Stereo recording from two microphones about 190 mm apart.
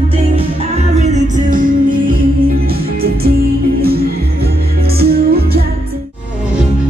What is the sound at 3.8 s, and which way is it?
Music, 55° right (ahead or behind).